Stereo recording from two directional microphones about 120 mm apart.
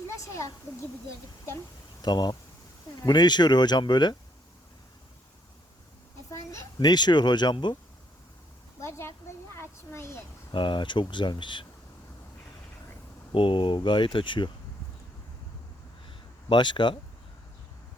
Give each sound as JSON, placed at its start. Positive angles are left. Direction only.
{"t": 0.1, "sound": "speech", "side_deg": 25}
{"t": 2.0, "sound": "speech", "side_deg": 35}
{"t": 6.7, "sound": "speech", "side_deg": 35}
{"t": 8.8, "sound": "a sound", "side_deg": 20}
{"t": 10.5, "sound": "speech", "side_deg": 40}
{"t": 13.3, "sound": "speech", "side_deg": 45}
{"t": 16.0, "sound": "a sound", "side_deg": 40}